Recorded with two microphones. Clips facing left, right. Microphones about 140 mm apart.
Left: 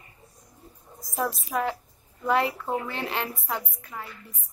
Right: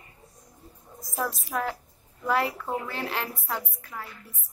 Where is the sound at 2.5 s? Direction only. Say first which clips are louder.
Left 2 dB; 10° left (ahead or behind).